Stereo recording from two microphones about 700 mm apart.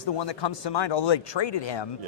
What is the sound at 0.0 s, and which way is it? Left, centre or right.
A man's voice, left.